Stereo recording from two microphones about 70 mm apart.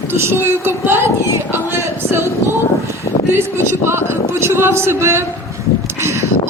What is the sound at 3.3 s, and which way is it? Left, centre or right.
A woman's voice, right.